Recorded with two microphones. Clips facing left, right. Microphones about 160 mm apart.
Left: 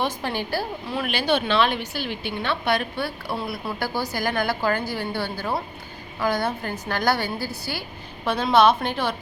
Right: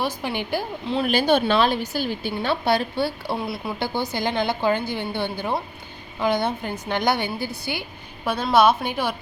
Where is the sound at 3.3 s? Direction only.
15° right (ahead or behind).